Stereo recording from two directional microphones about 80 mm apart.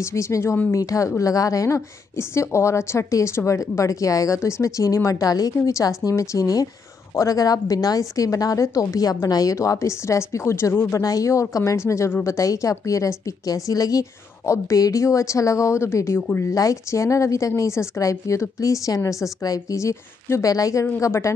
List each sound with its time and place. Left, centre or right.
0.0 s a woman's voice: left
11.0 s a woman's voice: left
16.2 s a woman's voice: left
16.4 s a woman's voice: left